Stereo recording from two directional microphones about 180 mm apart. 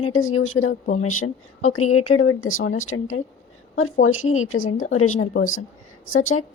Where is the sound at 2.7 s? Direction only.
90° left.